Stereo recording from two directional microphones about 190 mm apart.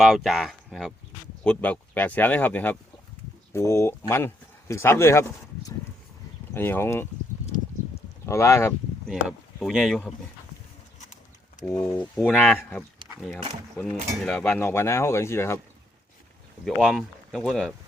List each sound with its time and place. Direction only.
0.0 s speech: centre (ahead or behind)
8.3 s speech: 15° left (ahead or behind)
9.0 s speech: centre (ahead or behind)
11.7 s speech: 15° left (ahead or behind)
14.6 s speech: 15° left (ahead or behind)
16.6 s speech: centre (ahead or behind)